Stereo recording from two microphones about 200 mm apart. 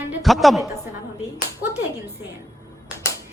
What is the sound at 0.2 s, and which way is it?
Speech, centre (ahead or behind).